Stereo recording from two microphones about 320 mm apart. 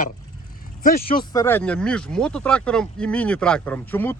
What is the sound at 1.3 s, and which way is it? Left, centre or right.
Speech, centre.